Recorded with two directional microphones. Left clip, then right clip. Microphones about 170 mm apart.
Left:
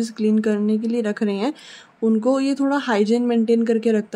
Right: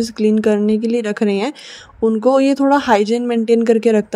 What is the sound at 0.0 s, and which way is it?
Speech, 30° right (ahead or behind).